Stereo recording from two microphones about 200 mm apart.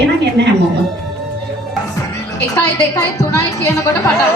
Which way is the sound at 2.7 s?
15° left (ahead or behind).